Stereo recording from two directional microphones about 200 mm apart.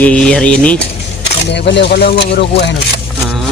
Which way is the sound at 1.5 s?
60° left (ahead or behind).